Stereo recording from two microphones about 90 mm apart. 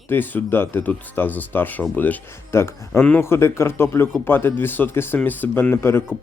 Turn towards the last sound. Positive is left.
turn(degrees=25)  # may be behind; listen again after turning